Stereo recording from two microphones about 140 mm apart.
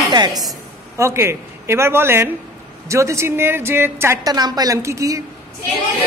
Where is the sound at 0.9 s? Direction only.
20° right (ahead or behind).